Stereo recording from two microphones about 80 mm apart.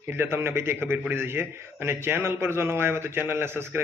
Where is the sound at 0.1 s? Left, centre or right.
Right.